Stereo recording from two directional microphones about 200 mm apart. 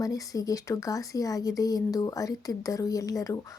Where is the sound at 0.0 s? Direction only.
15° left (ahead or behind).